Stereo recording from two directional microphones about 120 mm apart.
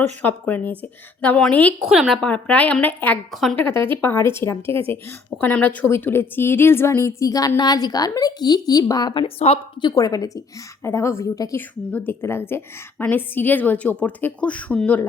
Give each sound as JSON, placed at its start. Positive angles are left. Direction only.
{"t": 0.2, "sound": "a woman's voice", "side_deg": 15}
{"t": 1.9, "sound": "speech", "side_deg": -5}
{"t": 2.2, "sound": "a woman's voice", "side_deg": 10}
{"t": 3.3, "sound": "speech", "side_deg": 0}
{"t": 3.6, "sound": "a woman's voice", "side_deg": 20}
{"t": 9.2, "sound": "a woman's voice", "side_deg": 55}
{"t": 9.9, "sound": "a woman's voice", "side_deg": 30}
{"t": 11.9, "sound": "a woman's voice", "side_deg": 15}